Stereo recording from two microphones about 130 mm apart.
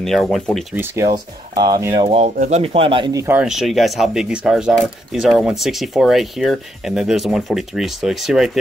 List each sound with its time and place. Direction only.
0.0 s speech: 5° left (ahead or behind)
1.0 s speech: 30° right (ahead or behind)
2.0 s speech: 55° right (ahead or behind)
2.3 s speech: 75° right (ahead or behind)
2.6 s speech: 45° right (ahead or behind)
3.1 s speech: 25° right (ahead or behind)
3.3 s speech: 5° right (ahead or behind)